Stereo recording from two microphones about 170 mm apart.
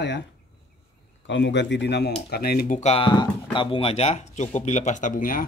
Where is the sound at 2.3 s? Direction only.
65° left (ahead or behind).